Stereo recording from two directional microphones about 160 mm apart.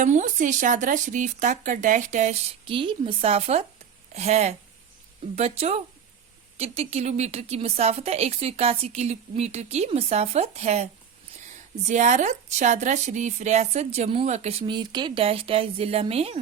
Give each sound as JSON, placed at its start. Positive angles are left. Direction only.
{"t": 0.0, "sound": "a woman's voice", "side_deg": -50}
{"t": 2.6, "sound": "a woman's voice", "side_deg": -30}
{"t": 11.9, "sound": "a woman's voice", "side_deg": -50}
{"t": 14.7, "sound": "a woman's voice", "side_deg": -30}